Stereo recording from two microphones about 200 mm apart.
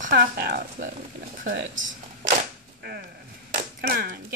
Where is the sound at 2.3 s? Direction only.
45° right (ahead or behind).